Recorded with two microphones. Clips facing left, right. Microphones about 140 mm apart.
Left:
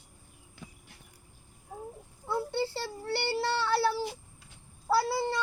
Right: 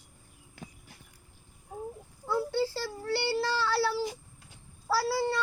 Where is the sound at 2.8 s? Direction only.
25° left (ahead or behind).